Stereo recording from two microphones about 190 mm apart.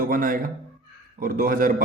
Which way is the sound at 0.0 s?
45° right (ahead or behind).